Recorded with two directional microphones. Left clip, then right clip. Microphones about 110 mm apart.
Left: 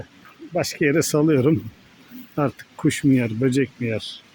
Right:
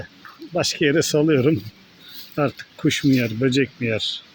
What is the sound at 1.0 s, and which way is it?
Speech, 25° left (ahead or behind).